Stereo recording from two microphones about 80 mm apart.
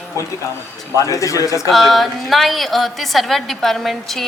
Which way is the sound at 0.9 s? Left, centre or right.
Left.